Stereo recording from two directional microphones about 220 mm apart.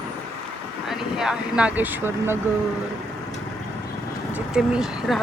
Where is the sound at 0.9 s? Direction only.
Centre (ahead or behind).